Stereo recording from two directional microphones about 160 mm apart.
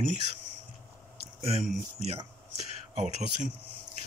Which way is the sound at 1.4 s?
40° right (ahead or behind).